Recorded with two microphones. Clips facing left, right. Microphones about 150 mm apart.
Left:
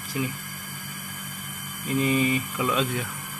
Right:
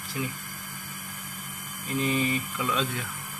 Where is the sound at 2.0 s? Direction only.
10° left (ahead or behind).